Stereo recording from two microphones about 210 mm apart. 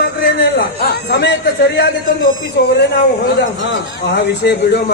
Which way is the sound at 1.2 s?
55° left (ahead or behind).